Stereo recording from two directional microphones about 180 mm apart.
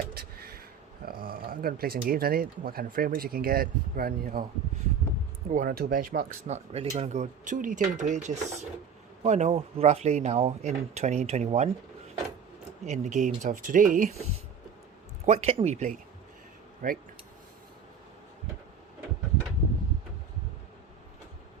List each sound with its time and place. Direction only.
0.1 s a sound: 60° right (ahead or behind)
1.0 s speech: 55° right (ahead or behind)
5.5 s speech: 50° right (ahead or behind)
6.5 s speech: 35° right (ahead or behind)
12.8 s speech: 40° right (ahead or behind)
15.3 s speech: 35° right (ahead or behind); by 17.0 s 50° right (ahead or behind)